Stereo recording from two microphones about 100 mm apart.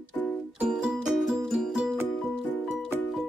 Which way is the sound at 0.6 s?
5° right (ahead or behind).